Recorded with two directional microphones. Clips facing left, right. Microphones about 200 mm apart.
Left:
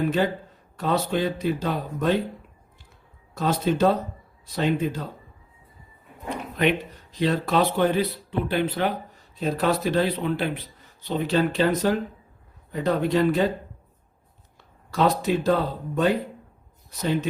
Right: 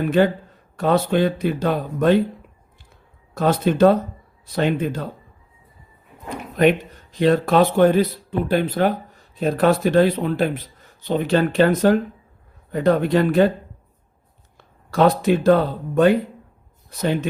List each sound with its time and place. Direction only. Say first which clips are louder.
0.8 s speech: right 6 dB; 55° right (ahead or behind)
3.3 s speech: right 5 dB; 55° right (ahead or behind)
6.6 s speech: right 7 dB; 50° right (ahead or behind)
11.1 s speech: right 4 dB; 55° right (ahead or behind)
14.9 s speech: right 5 dB; 50° right (ahead or behind)
17.0 s speech: right 3 dB; 55° right (ahead or behind)